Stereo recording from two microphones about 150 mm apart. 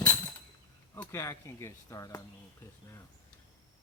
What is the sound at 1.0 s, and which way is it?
Speech, 20° left (ahead or behind).